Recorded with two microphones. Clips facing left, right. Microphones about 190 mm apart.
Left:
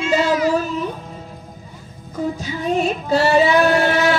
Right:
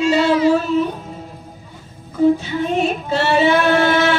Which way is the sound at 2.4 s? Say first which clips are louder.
Right 1 dB; 40° left (ahead or behind).